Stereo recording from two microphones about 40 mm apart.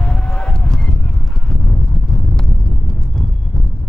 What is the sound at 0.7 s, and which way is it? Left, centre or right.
Honk, centre.